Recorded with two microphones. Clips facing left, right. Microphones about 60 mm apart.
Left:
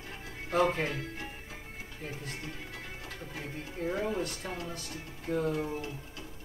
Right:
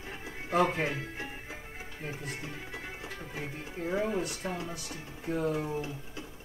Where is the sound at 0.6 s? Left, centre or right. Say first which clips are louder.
Even; centre.